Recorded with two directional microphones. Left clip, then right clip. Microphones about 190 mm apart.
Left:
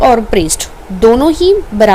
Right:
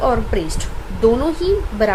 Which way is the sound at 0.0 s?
40° left (ahead or behind).